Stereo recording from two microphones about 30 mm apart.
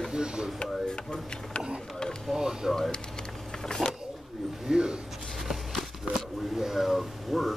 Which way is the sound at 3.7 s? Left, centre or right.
Left.